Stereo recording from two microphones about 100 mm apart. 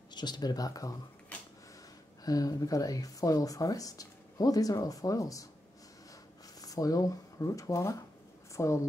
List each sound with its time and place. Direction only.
0.1 s speech: 45° left (ahead or behind)
2.2 s speech: 40° left (ahead or behind)
6.6 s speech: 35° left (ahead or behind)